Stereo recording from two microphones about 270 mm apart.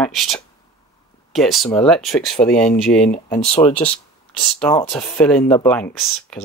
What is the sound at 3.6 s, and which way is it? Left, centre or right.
Speech, centre.